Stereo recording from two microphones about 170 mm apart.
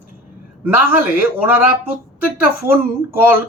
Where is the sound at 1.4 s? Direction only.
10° right (ahead or behind).